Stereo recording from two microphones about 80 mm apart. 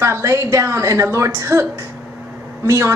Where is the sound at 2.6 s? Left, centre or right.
Right.